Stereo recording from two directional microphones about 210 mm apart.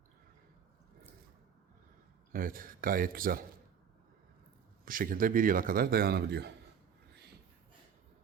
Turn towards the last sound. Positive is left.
turn(degrees=-50)  # may be behind; listen again after turning